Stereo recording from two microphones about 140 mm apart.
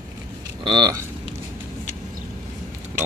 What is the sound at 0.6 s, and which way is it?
Speech, 30° right (ahead or behind).